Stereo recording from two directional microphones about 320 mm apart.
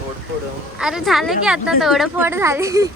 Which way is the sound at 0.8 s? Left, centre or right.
Centre.